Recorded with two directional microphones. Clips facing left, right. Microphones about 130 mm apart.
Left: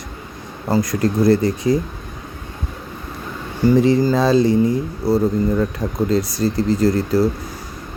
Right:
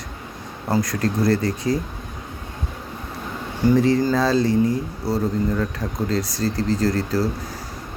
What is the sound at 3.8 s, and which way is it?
Speech, 15° left (ahead or behind).